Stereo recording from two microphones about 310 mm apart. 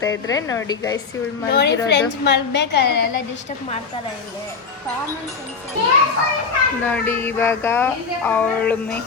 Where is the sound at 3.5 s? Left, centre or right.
Left.